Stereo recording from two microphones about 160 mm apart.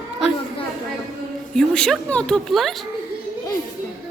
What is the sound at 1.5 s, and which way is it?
A woman's voice, 5° left (ahead or behind).